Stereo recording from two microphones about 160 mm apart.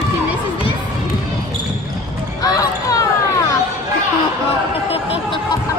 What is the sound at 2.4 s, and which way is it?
Music, 20° left (ahead or behind).